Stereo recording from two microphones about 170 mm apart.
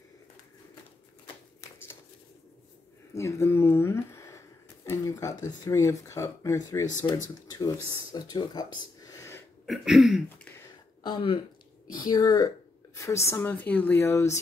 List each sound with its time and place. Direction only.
3.2 s a woman's voice: 15° left (ahead or behind)
7.9 s speech: 25° left (ahead or behind)
9.7 s throat clearing: centre (ahead or behind)
11.0 s a woman's voice: 30° left (ahead or behind)